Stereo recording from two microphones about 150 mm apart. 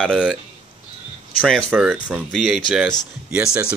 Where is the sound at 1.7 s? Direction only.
5° right (ahead or behind).